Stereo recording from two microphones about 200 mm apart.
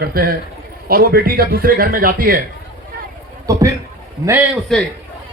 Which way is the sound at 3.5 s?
15° right (ahead or behind).